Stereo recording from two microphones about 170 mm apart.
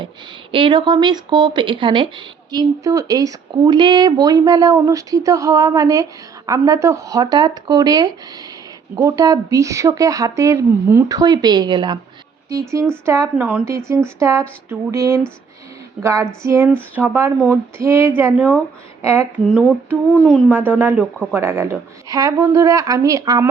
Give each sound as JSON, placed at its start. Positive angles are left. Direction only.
{"t": 0.5, "sound": "speech", "side_deg": -30}
{"t": 21.0, "sound": "speech", "side_deg": 5}
{"t": 21.3, "sound": "speech", "side_deg": -15}